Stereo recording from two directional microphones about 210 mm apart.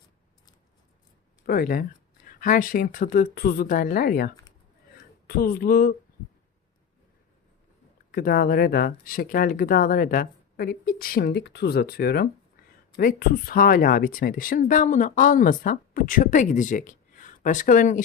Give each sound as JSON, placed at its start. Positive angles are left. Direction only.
{"t": 1.5, "sound": "speech", "side_deg": 45}
{"t": 5.3, "sound": "speech", "side_deg": 45}
{"t": 8.1, "sound": "speech", "side_deg": 45}